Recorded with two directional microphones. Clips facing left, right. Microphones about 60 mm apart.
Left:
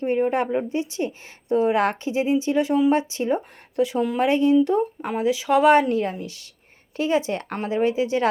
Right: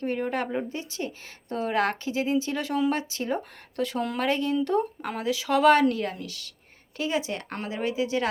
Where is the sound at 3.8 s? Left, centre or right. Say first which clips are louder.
Left 6 dB; centre.